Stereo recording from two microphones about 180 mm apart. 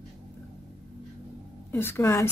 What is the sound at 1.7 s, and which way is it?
Speech, 10° left (ahead or behind).